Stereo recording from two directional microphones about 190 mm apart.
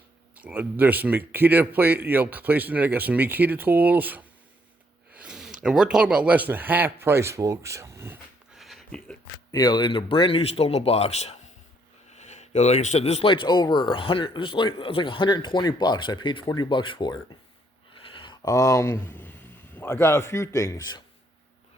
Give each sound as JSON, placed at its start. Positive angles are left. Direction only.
{"t": 0.3, "sound": "speech", "side_deg": -10}
{"t": 8.5, "sound": "a sound", "side_deg": 0}
{"t": 9.5, "sound": "speech", "side_deg": 20}